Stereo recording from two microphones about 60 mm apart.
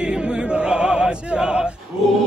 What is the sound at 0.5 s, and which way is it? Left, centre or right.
Music, centre.